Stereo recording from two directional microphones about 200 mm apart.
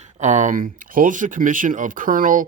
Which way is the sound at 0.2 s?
35° right (ahead or behind).